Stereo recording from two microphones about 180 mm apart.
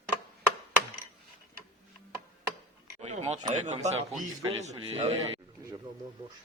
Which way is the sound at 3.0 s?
40° right (ahead or behind).